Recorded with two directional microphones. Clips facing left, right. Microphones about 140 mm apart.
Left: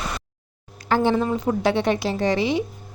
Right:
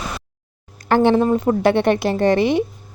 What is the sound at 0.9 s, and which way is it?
Speech, 60° right (ahead or behind).